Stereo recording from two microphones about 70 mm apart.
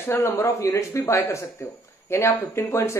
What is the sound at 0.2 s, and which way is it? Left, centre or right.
Speech, left.